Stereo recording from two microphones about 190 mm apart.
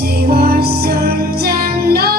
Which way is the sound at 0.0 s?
55° right (ahead or behind).